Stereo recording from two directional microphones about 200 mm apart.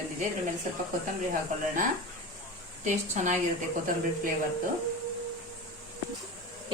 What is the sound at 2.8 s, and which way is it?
Speech, 40° right (ahead or behind).